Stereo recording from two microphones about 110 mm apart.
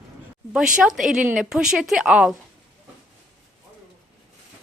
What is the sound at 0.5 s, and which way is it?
Speech, 5° right (ahead or behind).